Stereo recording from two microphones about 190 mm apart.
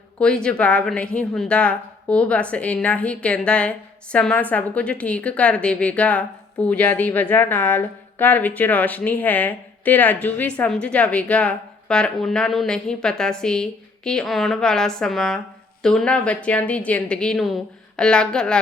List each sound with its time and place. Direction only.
0.2 s a woman's voice: 5° left (ahead or behind)